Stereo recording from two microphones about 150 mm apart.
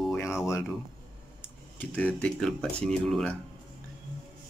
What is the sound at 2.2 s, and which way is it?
Speech, 5° left (ahead or behind).